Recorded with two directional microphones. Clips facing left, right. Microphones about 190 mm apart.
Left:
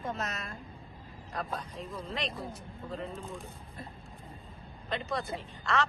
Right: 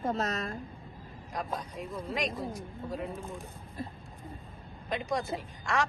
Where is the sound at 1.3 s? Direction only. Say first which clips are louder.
Right 1 dB; 15° right (ahead or behind).